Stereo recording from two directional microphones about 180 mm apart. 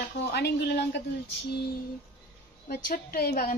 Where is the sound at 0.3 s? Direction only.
65° left (ahead or behind).